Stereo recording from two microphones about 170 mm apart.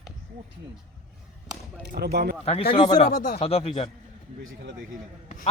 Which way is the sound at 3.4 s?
35° left (ahead or behind).